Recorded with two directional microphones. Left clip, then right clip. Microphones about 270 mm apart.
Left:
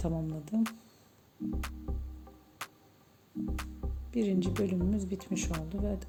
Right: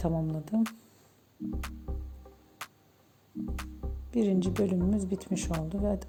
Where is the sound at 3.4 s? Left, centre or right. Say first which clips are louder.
Left 1 dB; centre.